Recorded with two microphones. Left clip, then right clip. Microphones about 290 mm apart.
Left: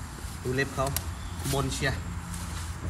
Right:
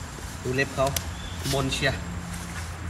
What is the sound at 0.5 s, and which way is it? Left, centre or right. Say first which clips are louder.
Speech: right 5 dB; centre.